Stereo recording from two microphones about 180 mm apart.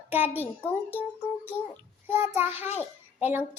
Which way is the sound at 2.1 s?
10° right (ahead or behind).